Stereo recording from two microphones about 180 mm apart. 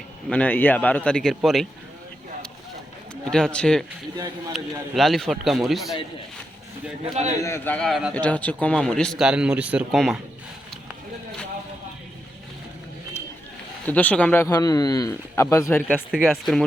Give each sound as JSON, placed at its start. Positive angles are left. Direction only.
{"t": 0.3, "sound": "a man's voice", "side_deg": 10}
{"t": 3.2, "sound": "speech", "side_deg": 5}
{"t": 7.4, "sound": "a man's voice", "side_deg": 15}
{"t": 13.8, "sound": "a man's voice", "side_deg": 10}
{"t": 14.4, "sound": "a man's voice", "side_deg": 20}
{"t": 16.1, "sound": "speech", "side_deg": 0}